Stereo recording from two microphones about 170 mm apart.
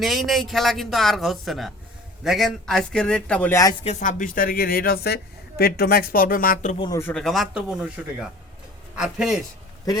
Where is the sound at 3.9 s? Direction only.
45° left (ahead or behind).